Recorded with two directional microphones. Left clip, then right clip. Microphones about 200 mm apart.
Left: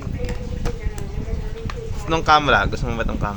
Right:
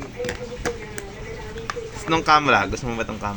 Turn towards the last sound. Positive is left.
turn(degrees=0)  # may be behind; listen again after turning